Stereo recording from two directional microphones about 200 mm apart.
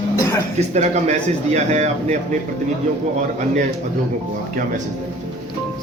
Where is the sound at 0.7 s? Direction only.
35° right (ahead or behind).